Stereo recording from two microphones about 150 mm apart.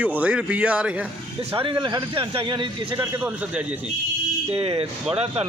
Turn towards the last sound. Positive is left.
turn(degrees=-45)  # may be behind; listen again after turning